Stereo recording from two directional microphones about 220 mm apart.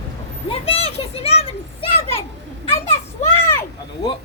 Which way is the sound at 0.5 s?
25° left (ahead or behind).